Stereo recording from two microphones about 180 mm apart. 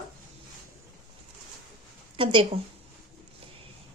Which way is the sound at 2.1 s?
30° right (ahead or behind).